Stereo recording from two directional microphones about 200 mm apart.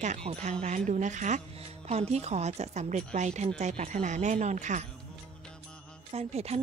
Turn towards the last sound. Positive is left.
turn(degrees=-30)  # may be behind; listen again after turning